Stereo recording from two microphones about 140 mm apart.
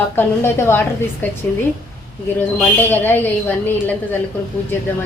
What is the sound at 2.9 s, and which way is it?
Speech, 15° left (ahead or behind).